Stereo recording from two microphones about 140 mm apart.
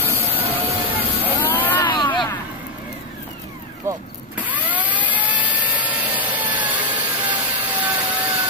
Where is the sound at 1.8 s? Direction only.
35° left (ahead or behind).